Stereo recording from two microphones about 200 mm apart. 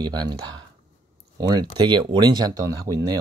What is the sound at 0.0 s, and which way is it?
Speech, 20° right (ahead or behind).